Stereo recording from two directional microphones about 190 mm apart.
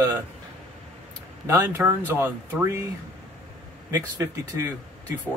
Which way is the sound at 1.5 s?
15° right (ahead or behind).